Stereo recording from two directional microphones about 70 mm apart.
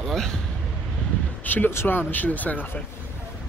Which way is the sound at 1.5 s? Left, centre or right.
Left.